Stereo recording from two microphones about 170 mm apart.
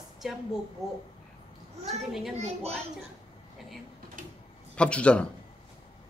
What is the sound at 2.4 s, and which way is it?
Speech, 40° right (ahead or behind).